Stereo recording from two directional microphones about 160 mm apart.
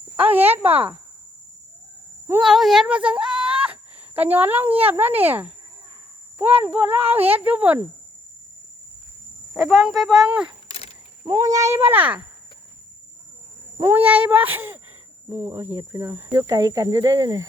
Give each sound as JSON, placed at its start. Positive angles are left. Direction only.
{"t": 0.2, "sound": "a child's voice", "side_deg": -10}
{"t": 2.4, "sound": "a child's voice", "side_deg": 0}
{"t": 9.5, "sound": "speech", "side_deg": 0}
{"t": 10.7, "sound": "a sound", "side_deg": 40}
{"t": 11.3, "sound": "a child's voice", "side_deg": -20}
{"t": 13.7, "sound": "a child's voice", "side_deg": -15}